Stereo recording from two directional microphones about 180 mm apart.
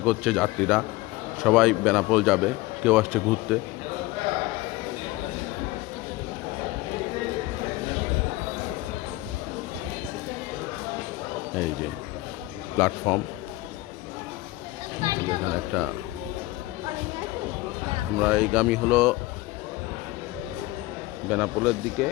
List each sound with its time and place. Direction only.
0.0 s a man's voice: centre (ahead or behind)
12.7 s a man's voice: 10° left (ahead or behind)
15.0 s chatter: 20° right (ahead or behind)
15.7 s a man's voice: 5° right (ahead or behind)
18.2 s a man's voice: 5° right (ahead or behind)
21.2 s a man's voice: 5° right (ahead or behind)